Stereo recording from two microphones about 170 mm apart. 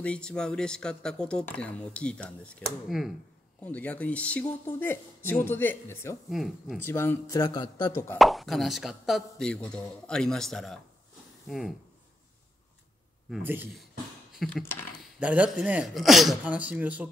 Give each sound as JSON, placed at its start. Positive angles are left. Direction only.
{"t": 0.0, "sound": "speech", "side_deg": 5}
{"t": 6.3, "sound": "speech", "side_deg": 0}
{"t": 6.8, "sound": "speech", "side_deg": 15}
{"t": 8.2, "sound": "speech", "side_deg": 0}
{"t": 13.4, "sound": "speech", "side_deg": -10}
{"t": 14.3, "sound": "typing", "side_deg": 0}
{"t": 15.0, "sound": "speech", "side_deg": -10}